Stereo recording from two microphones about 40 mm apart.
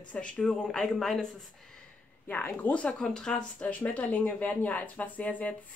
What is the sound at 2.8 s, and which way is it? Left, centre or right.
Speech, centre.